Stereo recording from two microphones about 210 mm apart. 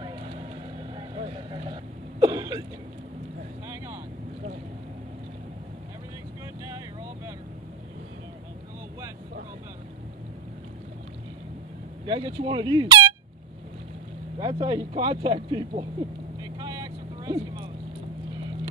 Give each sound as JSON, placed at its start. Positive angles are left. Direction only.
{"t": 0.9, "sound": "throat clearing", "side_deg": -25}
{"t": 3.6, "sound": "vehicle", "side_deg": -15}
{"t": 12.1, "sound": "speech", "side_deg": -25}
{"t": 14.4, "sound": "speech", "side_deg": -20}
{"t": 16.5, "sound": "vehicle", "side_deg": -20}